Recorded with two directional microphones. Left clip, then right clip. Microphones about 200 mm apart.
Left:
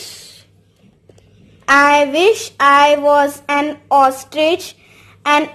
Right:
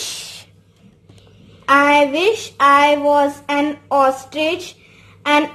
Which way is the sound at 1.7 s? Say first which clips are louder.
Left 2 dB; 30° left (ahead or behind).